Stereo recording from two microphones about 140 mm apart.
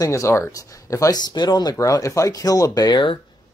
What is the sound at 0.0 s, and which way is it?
Speech, 20° left (ahead or behind).